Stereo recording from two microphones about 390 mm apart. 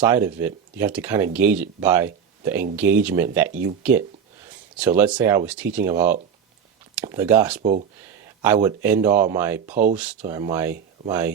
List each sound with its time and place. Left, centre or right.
0.0 s speech: centre
4.8 s speech: centre
7.6 s speech: centre
8.4 s speech: centre